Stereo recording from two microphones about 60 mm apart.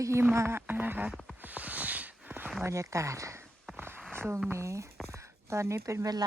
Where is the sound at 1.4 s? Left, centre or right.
Right.